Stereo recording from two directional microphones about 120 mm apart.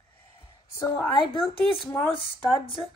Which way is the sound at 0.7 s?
25° left (ahead or behind).